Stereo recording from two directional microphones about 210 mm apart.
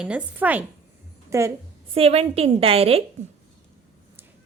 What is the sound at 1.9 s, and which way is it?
A woman's voice, 30° right (ahead or behind).